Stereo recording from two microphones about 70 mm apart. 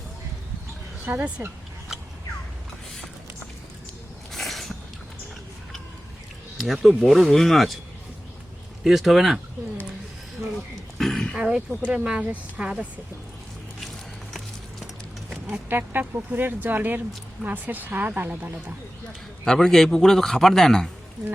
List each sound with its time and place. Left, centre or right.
1.1 s speech: right
4.3 s a sound: centre
6.8 s a man's voice: centre
8.8 s a man's voice: centre
10.9 s throat clearing: centre
11.3 s speech: centre
15.7 s speech: right
19.5 s a man's voice: centre